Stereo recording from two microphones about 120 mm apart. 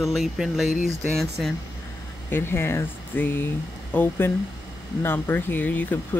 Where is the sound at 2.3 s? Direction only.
20° left (ahead or behind).